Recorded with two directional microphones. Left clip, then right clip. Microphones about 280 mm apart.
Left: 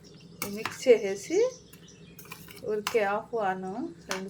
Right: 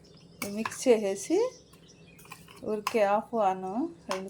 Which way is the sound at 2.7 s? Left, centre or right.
Right.